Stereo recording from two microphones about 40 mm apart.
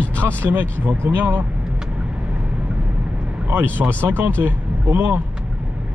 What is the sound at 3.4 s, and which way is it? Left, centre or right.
A man's voice, right.